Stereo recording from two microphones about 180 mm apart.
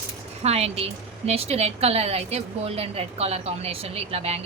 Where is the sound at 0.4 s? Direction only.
35° right (ahead or behind).